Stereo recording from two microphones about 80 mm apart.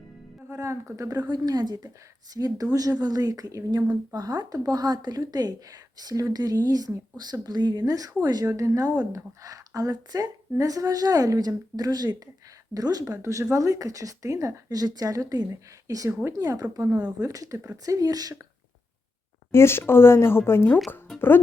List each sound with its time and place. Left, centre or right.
0.5 s a woman's voice: right
13.2 s a woman's voice: right
14.7 s a woman's voice: right
19.5 s speech: left